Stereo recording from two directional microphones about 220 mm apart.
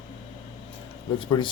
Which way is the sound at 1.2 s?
20° left (ahead or behind).